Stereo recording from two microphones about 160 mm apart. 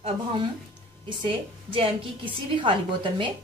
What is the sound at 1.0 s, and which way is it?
A woman's voice, 30° right (ahead or behind).